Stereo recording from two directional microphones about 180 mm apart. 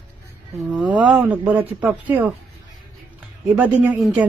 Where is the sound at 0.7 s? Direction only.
5° right (ahead or behind).